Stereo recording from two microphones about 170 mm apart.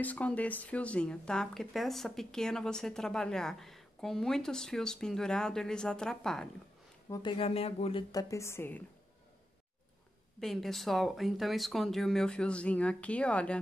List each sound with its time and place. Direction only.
0.0 s speech: 10° left (ahead or behind)
7.1 s speech: 30° left (ahead or behind)
8.1 s a woman's voice: 20° left (ahead or behind)
10.4 s speech: centre (ahead or behind)